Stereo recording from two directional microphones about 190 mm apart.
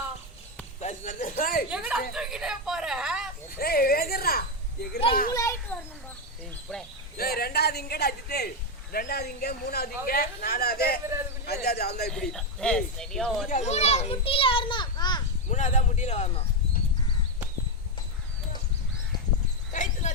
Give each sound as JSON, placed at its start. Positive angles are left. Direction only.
{"t": 0.8, "sound": "a sound", "side_deg": 40}
{"t": 1.7, "sound": "a sound", "side_deg": -5}
{"t": 3.6, "sound": "speech", "side_deg": 50}
{"t": 5.3, "sound": "a child's voice", "side_deg": 15}
{"t": 7.2, "sound": "a man's voice", "side_deg": 55}
{"t": 12.1, "sound": "speech", "side_deg": 0}
{"t": 13.5, "sound": "a child's voice", "side_deg": 35}
{"t": 15.4, "sound": "speech", "side_deg": 40}
{"t": 19.7, "sound": "a sound", "side_deg": 40}